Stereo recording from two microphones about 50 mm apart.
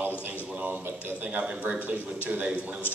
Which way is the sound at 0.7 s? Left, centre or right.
Right.